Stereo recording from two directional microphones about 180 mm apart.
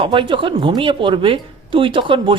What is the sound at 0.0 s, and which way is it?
Speech, 30° right (ahead or behind).